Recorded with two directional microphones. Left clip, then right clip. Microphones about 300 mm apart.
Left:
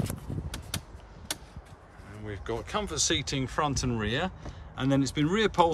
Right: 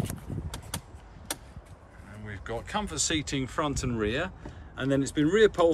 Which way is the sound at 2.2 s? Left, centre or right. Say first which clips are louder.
Left 1 dB; centre.